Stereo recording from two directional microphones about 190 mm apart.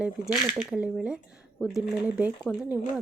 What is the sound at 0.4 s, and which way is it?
Speech, 5° right (ahead or behind).